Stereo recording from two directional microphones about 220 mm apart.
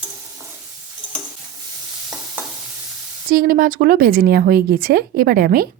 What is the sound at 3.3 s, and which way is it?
Speech, 40° right (ahead or behind).